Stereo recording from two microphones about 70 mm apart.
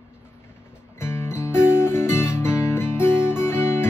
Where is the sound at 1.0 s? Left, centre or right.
Left.